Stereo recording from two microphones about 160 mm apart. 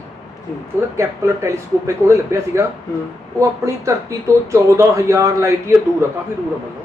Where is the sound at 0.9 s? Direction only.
15° right (ahead or behind).